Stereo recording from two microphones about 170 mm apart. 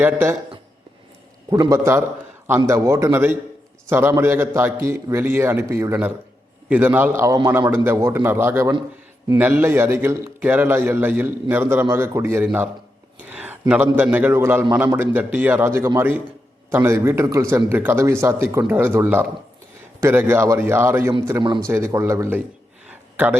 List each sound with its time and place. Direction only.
0.0 s a man's voice: 10° right (ahead or behind)
1.5 s a man's voice: 20° right (ahead or behind)
21.4 s a man's voice: 25° right (ahead or behind)
21.7 s a man's voice: 15° right (ahead or behind)
22.9 s a sound: 10° right (ahead or behind)